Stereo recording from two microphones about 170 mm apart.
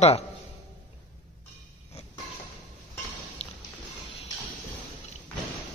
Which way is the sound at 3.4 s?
35° left (ahead or behind).